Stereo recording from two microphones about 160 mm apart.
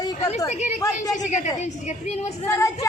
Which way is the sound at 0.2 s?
45° left (ahead or behind).